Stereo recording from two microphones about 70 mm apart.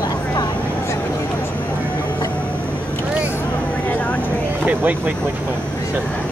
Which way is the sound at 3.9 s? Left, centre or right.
Left.